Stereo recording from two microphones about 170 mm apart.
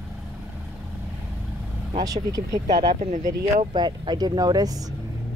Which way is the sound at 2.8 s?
35° right (ahead or behind).